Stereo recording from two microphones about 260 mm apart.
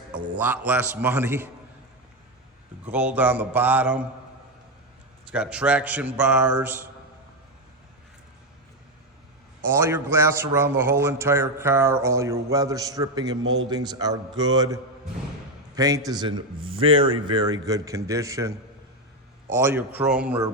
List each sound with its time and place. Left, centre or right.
0.3 s a man's voice: centre
2.8 s a man's voice: centre
5.3 s a man's voice: centre
9.6 s a man's voice: centre